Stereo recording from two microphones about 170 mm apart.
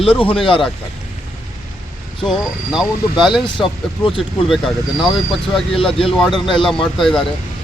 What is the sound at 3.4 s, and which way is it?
Speech, 30° left (ahead or behind).